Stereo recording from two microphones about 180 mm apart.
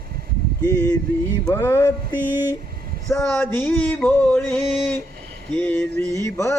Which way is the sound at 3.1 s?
10° left (ahead or behind).